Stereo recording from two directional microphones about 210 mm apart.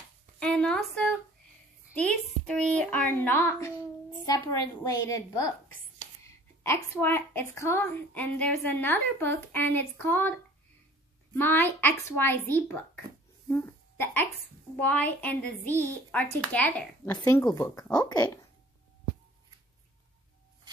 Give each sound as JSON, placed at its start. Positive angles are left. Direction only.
{"t": 0.4, "sound": "a woman's voice", "side_deg": 5}
{"t": 11.3, "sound": "a woman's voice", "side_deg": 10}
{"t": 13.5, "sound": "hiccup", "side_deg": 10}
{"t": 14.8, "sound": "a woman's voice", "side_deg": 5}